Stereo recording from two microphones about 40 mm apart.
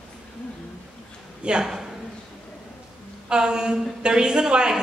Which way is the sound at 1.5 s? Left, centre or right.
Right.